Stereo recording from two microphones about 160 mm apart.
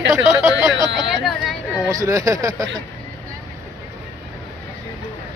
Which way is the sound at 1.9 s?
20° right (ahead or behind).